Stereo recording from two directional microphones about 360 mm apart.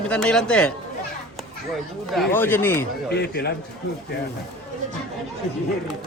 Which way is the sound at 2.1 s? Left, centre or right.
Centre.